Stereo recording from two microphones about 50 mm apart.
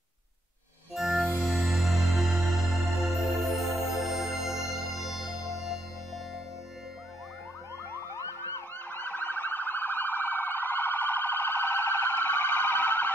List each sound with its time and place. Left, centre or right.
0.9 s music: centre
8.9 s siren: left